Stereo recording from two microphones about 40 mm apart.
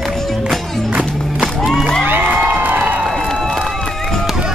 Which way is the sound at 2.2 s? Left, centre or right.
Right.